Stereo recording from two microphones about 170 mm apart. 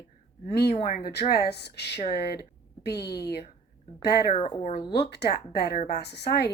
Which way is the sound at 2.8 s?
75° left (ahead or behind).